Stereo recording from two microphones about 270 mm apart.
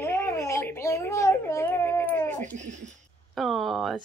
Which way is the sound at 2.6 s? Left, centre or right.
Right.